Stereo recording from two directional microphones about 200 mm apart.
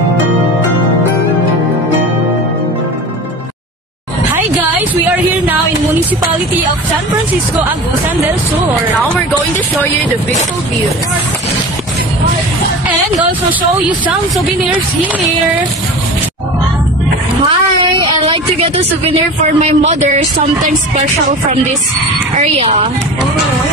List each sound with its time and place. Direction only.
18.0 s speech: 25° right (ahead or behind)
22.4 s speech: 30° right (ahead or behind)